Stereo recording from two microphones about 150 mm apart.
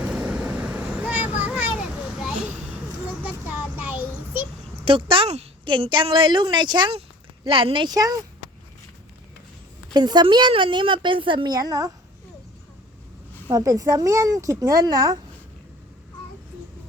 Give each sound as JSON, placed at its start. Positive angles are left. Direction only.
{"t": 0.0, "sound": "vehicle", "side_deg": -10}
{"t": 3.1, "sound": "child singing", "side_deg": -10}
{"t": 4.9, "sound": "speech", "side_deg": -35}
{"t": 9.9, "sound": "speech", "side_deg": -30}
{"t": 13.5, "sound": "speech", "side_deg": -25}